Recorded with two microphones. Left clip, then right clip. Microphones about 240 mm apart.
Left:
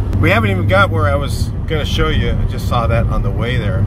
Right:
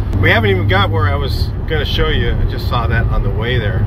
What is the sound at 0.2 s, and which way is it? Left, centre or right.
Speech, centre.